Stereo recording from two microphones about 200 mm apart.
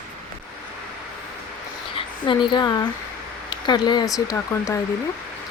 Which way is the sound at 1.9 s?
25° left (ahead or behind).